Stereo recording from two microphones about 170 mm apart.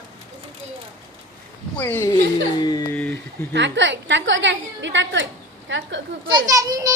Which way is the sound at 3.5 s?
90° right.